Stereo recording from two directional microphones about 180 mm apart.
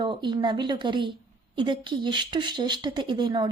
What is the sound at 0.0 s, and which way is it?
Speech, 25° right (ahead or behind).